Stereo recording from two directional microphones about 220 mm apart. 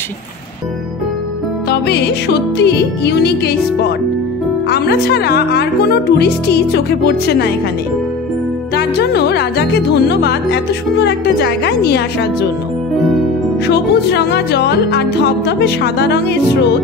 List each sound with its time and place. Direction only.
1.7 s music: 50° left (ahead or behind)
8.7 s music: 50° left (ahead or behind)
13.7 s music: 50° left (ahead or behind)